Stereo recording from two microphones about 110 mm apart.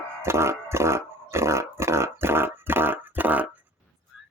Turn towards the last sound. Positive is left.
turn(degrees=-15)  # may be behind; listen again after turning